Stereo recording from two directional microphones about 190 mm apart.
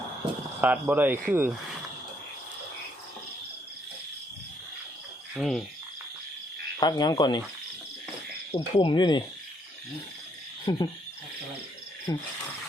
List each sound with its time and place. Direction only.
0.6 s speech: 10° right (ahead or behind)
5.4 s cricket: centre (ahead or behind)
6.7 s speech: 20° left (ahead or behind)
8.5 s speech: 25° left (ahead or behind)
10.7 s speech: 20° left (ahead or behind)
12.1 s speech: 25° left (ahead or behind)